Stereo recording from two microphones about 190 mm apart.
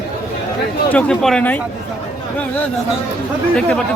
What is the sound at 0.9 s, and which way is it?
Speech, 5° left (ahead or behind).